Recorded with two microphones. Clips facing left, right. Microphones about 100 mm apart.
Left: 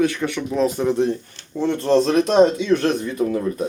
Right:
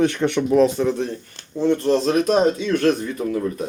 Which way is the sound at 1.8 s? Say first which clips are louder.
Left 2 dB; 30° left (ahead or behind).